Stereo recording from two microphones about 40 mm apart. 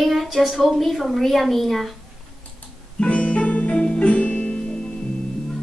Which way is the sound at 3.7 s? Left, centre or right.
Left.